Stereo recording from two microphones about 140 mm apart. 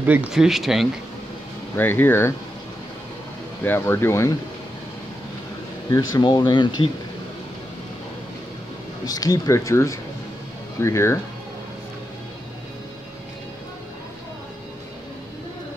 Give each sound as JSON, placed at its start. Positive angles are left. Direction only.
{"t": 0.0, "sound": "speech", "side_deg": -10}
{"t": 1.8, "sound": "speech", "side_deg": 15}
{"t": 3.6, "sound": "speech", "side_deg": 15}
{"t": 5.9, "sound": "speech", "side_deg": 30}
{"t": 9.0, "sound": "speech", "side_deg": 25}